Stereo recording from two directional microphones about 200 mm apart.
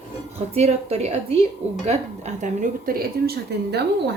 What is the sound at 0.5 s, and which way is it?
A woman's voice, 30° right (ahead or behind).